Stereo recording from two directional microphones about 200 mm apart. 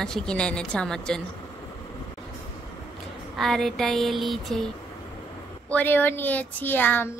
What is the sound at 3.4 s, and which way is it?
A woman's voice, centre (ahead or behind).